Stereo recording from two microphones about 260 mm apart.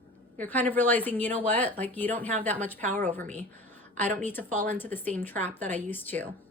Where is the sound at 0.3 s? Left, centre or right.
Centre.